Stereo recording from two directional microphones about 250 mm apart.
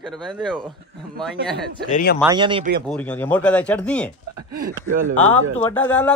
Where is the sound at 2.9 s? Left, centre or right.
Centre.